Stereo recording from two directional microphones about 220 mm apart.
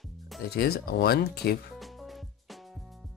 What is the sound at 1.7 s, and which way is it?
Music, centre (ahead or behind).